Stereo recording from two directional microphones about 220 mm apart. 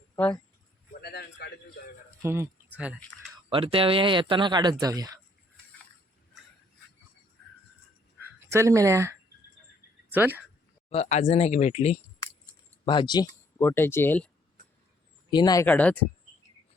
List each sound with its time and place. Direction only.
1.0 s a man's voice: 45° left (ahead or behind)
2.2 s speech: 10° right (ahead or behind)
3.5 s speech: 25° right (ahead or behind)
8.4 s speech: 15° right (ahead or behind)
10.8 s speech: 30° left (ahead or behind); by 14.3 s 10° left (ahead or behind)
15.3 s speech: 20° left (ahead or behind)
15.6 s speech: 5° left (ahead or behind)